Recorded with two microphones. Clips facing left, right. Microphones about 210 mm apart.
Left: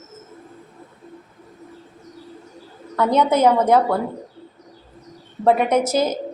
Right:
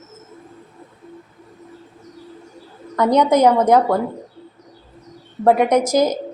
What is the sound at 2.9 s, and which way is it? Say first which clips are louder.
A woman's voice: right 3 dB; 15° right (ahead or behind).